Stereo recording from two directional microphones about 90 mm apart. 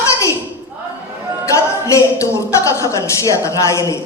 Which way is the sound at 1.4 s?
35° left (ahead or behind).